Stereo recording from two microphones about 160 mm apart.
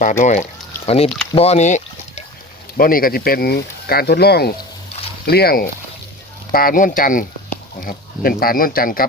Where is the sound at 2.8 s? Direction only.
65° left (ahead or behind).